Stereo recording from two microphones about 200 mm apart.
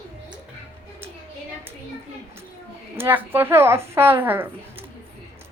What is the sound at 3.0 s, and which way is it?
A woman's voice, 10° right (ahead or behind).